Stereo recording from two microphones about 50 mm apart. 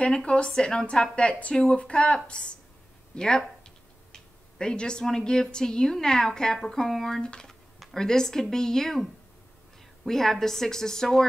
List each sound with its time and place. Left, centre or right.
0.0 s a woman's voice: left
4.1 s a sound: centre
5.0 s a woman's voice: centre
10.0 s a woman's voice: centre